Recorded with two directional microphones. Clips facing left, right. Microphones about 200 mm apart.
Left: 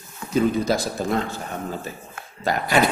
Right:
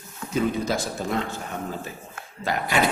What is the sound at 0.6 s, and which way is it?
Speech, 35° left (ahead or behind).